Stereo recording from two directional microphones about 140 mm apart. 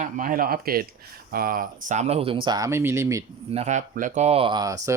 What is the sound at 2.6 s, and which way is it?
Speech, 20° right (ahead or behind).